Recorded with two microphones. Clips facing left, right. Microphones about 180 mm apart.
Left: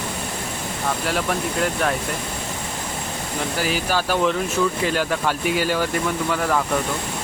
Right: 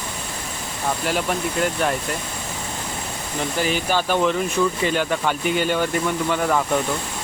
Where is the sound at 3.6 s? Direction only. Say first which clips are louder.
Right 2 dB; 5° left (ahead or behind).